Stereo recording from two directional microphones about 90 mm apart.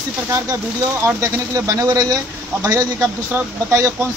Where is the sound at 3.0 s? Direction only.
25° right (ahead or behind).